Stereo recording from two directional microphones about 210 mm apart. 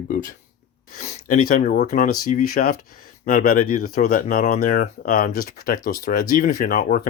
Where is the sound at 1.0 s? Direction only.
30° left (ahead or behind).